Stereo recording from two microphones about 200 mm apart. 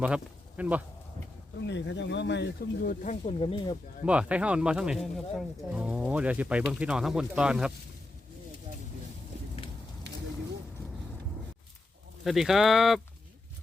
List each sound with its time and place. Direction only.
0.0 s speech: 5° right (ahead or behind)
1.6 s speech: 60° left (ahead or behind)
3.0 s speech: 35° left (ahead or behind)
4.0 s speech: 5° right (ahead or behind)
12.2 s speech: centre (ahead or behind)